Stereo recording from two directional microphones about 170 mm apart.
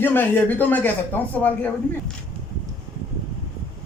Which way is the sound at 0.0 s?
10° left (ahead or behind).